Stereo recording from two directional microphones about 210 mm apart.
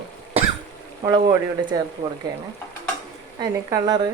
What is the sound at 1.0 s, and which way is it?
Speech, 15° right (ahead or behind).